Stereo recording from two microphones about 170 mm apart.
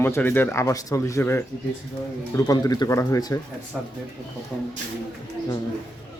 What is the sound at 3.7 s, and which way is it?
Speech, 5° right (ahead or behind).